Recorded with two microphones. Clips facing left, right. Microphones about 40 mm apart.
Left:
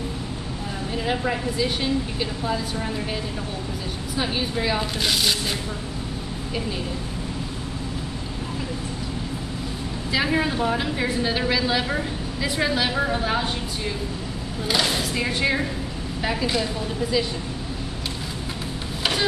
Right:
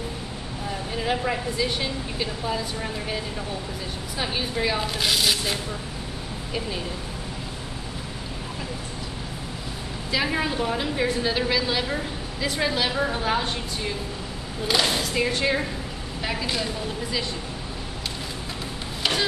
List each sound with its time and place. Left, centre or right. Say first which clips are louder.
1.0 s a woman's voice: left 1 dB; centre
4.2 s a woman's voice: left 1 dB; centre
10.1 s a woman's voice: left 2 dB; centre
14.7 s a woman's voice: even; centre